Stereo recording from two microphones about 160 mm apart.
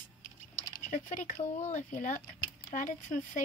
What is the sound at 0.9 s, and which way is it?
Speech, 50° left (ahead or behind).